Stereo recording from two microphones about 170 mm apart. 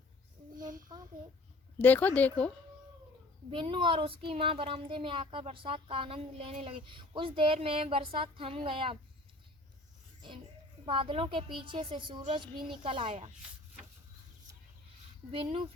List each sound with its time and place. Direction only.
0.5 s a sound: 50° right (ahead or behind)
1.8 s speech: 10° left (ahead or behind)
3.5 s speech: 30° right (ahead or behind)
10.2 s speech: 30° right (ahead or behind)
15.3 s speech: 30° right (ahead or behind)